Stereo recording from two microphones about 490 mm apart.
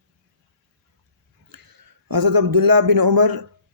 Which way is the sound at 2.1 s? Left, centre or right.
Right.